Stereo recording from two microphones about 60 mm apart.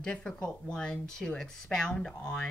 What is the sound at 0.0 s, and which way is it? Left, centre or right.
A woman's voice, centre.